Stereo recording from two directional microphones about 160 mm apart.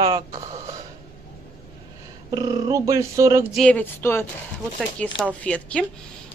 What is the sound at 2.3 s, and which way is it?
Speech, 25° right (ahead or behind).